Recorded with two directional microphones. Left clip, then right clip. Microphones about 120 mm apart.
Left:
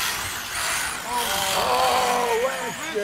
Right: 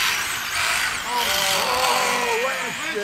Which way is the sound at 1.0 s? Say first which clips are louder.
Even; 10° right (ahead or behind).